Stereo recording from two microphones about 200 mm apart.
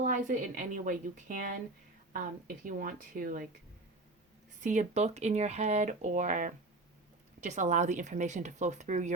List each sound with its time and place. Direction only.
0.0 s speech: 40° right (ahead or behind)
2.6 s speech: 45° right (ahead or behind)
4.6 s speech: 40° right (ahead or behind)